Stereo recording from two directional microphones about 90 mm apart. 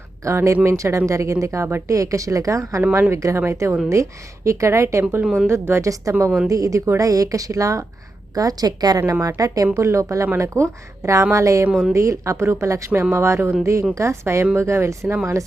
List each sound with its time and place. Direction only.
0.3 s a woman's voice: 30° right (ahead or behind)
11.7 s a woman's voice: centre (ahead or behind)
11.9 s speech: 35° right (ahead or behind)